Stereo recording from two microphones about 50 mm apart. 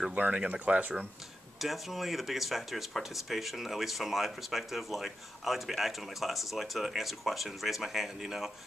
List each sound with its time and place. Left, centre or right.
0.1 s speech: right
1.6 s speech: centre